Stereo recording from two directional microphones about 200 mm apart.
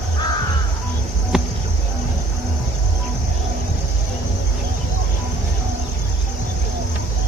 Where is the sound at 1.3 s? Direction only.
Centre (ahead or behind).